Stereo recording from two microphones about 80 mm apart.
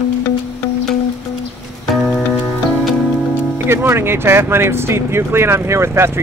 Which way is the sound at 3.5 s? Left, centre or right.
Right.